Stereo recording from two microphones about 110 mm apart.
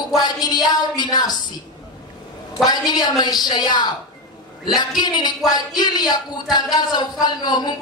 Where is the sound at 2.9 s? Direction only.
40° left (ahead or behind).